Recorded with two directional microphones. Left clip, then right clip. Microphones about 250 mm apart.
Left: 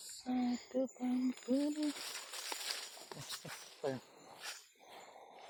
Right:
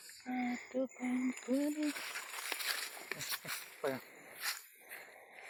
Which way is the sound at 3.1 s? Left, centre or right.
Right.